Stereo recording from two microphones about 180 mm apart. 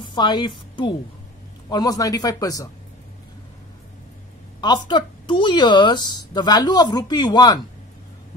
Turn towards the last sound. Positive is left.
turn(degrees=20)  # may be behind; listen again after turning